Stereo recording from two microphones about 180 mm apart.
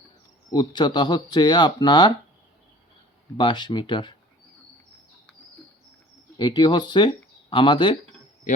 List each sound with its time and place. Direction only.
0.5 s speech: 25° left (ahead or behind)
3.3 s speech: 25° left (ahead or behind)
6.4 s speech: 25° left (ahead or behind)
8.5 s a man's voice: 45° left (ahead or behind)